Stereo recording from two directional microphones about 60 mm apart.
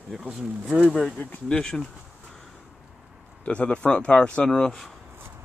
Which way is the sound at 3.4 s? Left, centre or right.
Centre.